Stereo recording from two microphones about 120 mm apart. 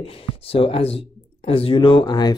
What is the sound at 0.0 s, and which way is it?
Speech, 50° left (ahead or behind).